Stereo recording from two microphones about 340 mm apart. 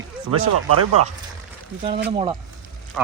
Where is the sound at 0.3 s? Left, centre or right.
Right.